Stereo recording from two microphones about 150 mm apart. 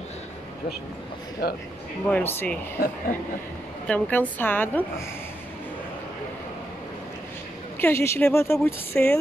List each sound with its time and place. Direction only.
1.4 s speech: 90° left
2.0 s a woman's voice: 10° left (ahead or behind)
3.8 s a woman's voice: 10° left (ahead or behind)
7.8 s a woman's voice: 15° left (ahead or behind)